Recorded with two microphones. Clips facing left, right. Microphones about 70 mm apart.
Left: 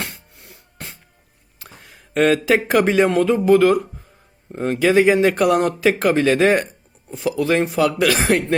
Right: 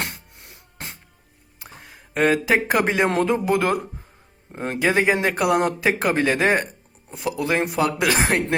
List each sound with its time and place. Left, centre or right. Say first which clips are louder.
2.1 s speech: left 3 dB; centre